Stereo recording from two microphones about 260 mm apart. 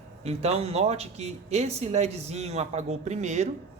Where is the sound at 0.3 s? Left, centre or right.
Right.